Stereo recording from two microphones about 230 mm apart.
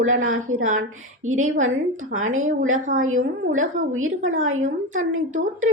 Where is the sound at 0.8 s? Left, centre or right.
Right.